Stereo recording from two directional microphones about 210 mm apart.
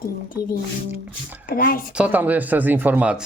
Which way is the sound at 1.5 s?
45° left (ahead or behind).